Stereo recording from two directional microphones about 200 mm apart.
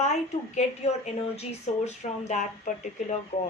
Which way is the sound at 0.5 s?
35° left (ahead or behind).